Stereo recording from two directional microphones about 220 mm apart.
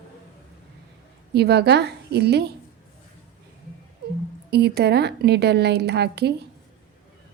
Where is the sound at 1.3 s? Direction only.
50° right (ahead or behind).